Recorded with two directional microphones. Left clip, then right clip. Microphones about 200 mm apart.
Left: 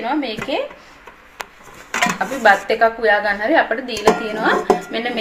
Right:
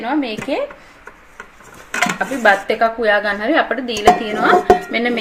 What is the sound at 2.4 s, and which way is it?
A woman's voice, 55° right (ahead or behind).